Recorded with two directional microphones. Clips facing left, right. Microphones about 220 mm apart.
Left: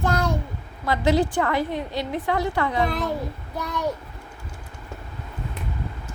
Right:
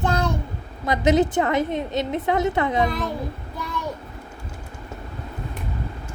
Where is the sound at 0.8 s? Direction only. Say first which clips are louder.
Right 2 dB; 20° right (ahead or behind).